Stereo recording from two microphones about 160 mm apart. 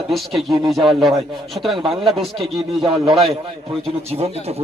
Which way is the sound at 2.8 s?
35° right (ahead or behind).